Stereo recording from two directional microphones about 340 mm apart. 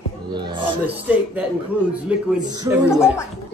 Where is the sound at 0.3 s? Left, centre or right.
Centre.